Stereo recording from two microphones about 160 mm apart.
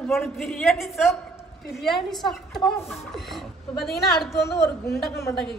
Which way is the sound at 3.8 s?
Centre (ahead or behind).